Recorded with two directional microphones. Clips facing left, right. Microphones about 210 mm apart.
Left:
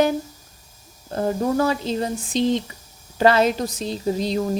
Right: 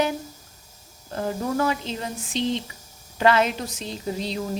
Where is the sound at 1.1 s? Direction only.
35° left (ahead or behind).